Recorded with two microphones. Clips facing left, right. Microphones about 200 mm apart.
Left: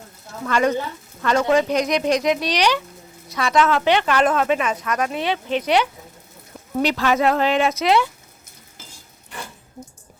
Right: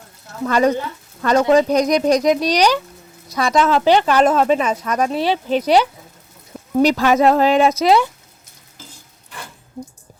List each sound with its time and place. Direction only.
0.4 s speech: 35° right (ahead or behind)